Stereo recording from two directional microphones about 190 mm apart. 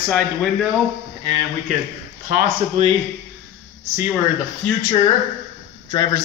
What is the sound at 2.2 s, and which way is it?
Speech, 40° right (ahead or behind).